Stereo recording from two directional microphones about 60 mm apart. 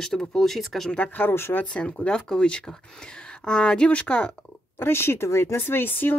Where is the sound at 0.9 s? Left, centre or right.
Left.